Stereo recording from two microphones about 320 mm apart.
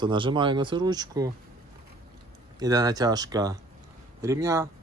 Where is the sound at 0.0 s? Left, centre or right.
Centre.